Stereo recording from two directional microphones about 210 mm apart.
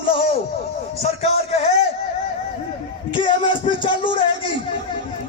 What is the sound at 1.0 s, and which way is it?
Speech, 30° left (ahead or behind).